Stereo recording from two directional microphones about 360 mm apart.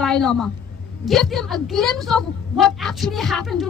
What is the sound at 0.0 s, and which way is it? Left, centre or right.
A woman's voice, centre.